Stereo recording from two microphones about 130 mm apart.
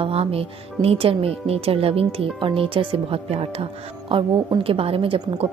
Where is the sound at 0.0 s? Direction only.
50° right (ahead or behind).